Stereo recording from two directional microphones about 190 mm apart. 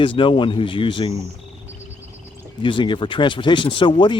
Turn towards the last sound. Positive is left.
turn(degrees=25)  # may be behind; listen again after turning